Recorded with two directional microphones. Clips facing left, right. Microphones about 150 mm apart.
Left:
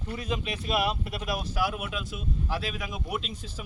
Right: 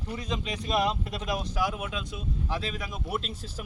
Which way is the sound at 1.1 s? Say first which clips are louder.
Even; 25° right (ahead or behind).